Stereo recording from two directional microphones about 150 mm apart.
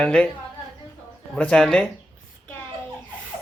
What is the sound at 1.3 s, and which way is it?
Speech, 5° left (ahead or behind).